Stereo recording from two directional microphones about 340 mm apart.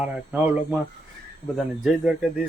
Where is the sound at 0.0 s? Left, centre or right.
Centre.